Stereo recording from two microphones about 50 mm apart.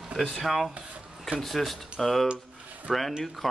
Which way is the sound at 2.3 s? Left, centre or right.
Right.